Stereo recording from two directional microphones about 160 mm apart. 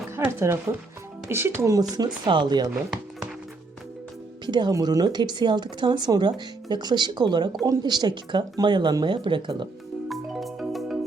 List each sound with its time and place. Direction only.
0.2 s speech: 15° right (ahead or behind)
4.4 s speech: 30° right (ahead or behind)
10.1 s music: centre (ahead or behind)